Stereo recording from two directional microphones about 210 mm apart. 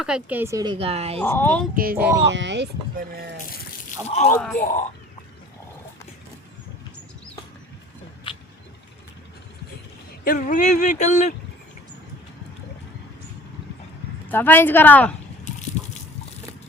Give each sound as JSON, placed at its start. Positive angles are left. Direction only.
{"t": 0.0, "sound": "speech", "side_deg": -5}
{"t": 1.2, "sound": "a woman's voice", "side_deg": 10}
{"t": 1.7, "sound": "speech", "side_deg": -45}
{"t": 2.2, "sound": "speech", "side_deg": -60}
{"t": 4.0, "sound": "speech", "side_deg": 30}
{"t": 4.4, "sound": "speech", "side_deg": 5}
{"t": 4.6, "sound": "speech", "side_deg": 35}
{"t": 8.3, "sound": "vehicle", "side_deg": 25}
{"t": 10.2, "sound": "speech", "side_deg": 40}
{"t": 14.3, "sound": "a woman's voice", "side_deg": 10}